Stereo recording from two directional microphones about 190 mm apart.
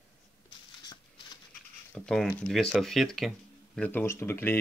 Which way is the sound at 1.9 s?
5° left (ahead or behind).